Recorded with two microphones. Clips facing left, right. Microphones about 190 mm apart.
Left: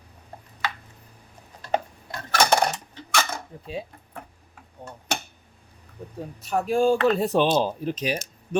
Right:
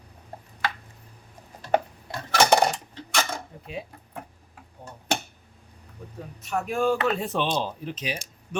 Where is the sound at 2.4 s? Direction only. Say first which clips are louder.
Right 1 dB; 5° right (ahead or behind).